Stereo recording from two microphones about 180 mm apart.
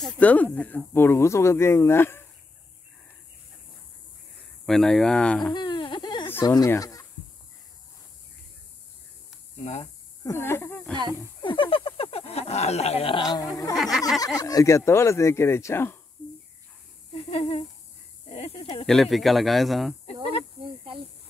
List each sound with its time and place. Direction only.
0.0 s speech: 10° left (ahead or behind)
4.6 s speech: centre (ahead or behind)
5.5 s baby cry: 25° left (ahead or behind)
6.2 s speech: 15° left (ahead or behind)
10.2 s speech: 15° left (ahead or behind)
11.4 s speech: 30° left (ahead or behind)
13.7 s speech: centre (ahead or behind)
14.2 s speech: 20° left (ahead or behind)
17.1 s speech: 35° left (ahead or behind)
18.9 s speech: centre (ahead or behind)